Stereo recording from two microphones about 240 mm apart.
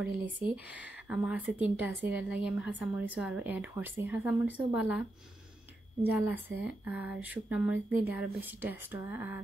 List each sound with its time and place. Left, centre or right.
1.0 s a woman's voice: centre
6.0 s speech: centre